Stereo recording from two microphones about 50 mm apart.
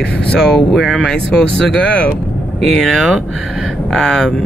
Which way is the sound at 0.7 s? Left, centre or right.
Centre.